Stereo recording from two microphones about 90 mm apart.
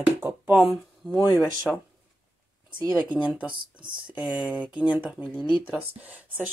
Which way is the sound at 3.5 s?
65° right (ahead or behind).